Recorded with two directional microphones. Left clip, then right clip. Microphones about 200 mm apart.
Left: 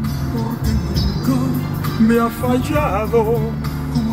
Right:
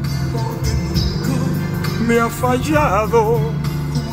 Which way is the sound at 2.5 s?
25° right (ahead or behind).